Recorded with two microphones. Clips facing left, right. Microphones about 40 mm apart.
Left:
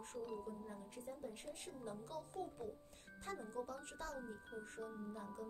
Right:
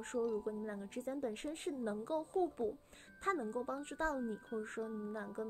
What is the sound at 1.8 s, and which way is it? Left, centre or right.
A woman's voice, right.